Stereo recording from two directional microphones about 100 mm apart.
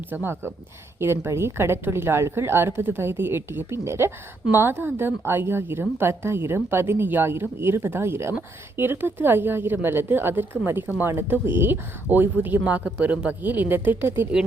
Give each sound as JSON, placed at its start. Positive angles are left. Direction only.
{"t": 0.1, "sound": "a woman's voice", "side_deg": -20}